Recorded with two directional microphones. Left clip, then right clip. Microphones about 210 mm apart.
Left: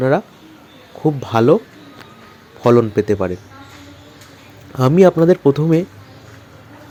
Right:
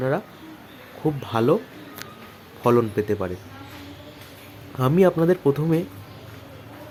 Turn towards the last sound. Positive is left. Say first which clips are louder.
# left 7 dB
turn(degrees=20)  # may be behind; listen again after turning